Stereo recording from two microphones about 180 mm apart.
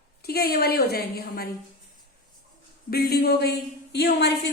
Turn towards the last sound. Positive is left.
turn(degrees=70)  # may be behind; listen again after turning